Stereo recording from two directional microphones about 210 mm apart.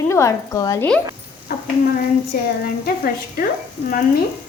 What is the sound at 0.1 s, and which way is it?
Speech, 15° left (ahead or behind).